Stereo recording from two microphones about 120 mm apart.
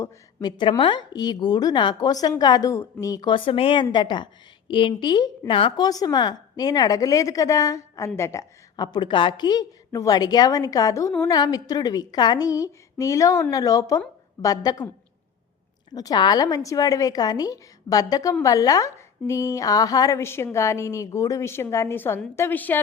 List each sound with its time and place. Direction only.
0.4 s a woman's voice: 40° left (ahead or behind)
8.7 s a woman's voice: 35° left (ahead or behind)
16.0 s a woman's voice: 35° left (ahead or behind); by 22.8 s 15° left (ahead or behind)